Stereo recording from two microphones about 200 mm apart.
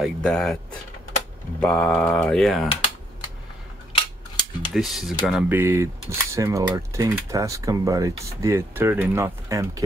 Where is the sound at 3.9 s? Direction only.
20° left (ahead or behind).